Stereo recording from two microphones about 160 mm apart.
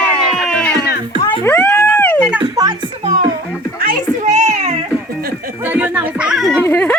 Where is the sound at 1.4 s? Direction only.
15° left (ahead or behind).